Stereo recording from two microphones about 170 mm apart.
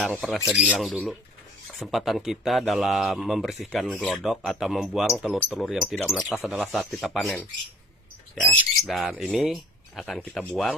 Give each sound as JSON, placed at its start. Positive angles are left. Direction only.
{"t": 0.0, "sound": "speech", "side_deg": 0}
{"t": 8.5, "sound": "speech", "side_deg": 0}